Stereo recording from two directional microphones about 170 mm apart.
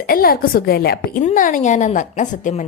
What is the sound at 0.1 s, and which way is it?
Speech, 60° left (ahead or behind).